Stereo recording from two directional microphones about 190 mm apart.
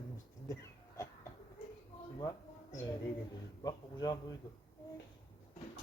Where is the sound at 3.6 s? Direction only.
20° left (ahead or behind).